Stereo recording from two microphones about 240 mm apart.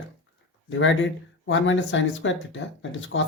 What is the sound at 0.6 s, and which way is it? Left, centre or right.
Speech, left.